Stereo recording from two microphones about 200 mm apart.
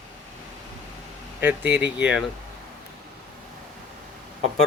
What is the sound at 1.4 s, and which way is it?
Speech, 10° right (ahead or behind).